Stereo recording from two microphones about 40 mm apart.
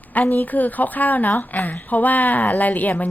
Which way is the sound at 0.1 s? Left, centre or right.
Left.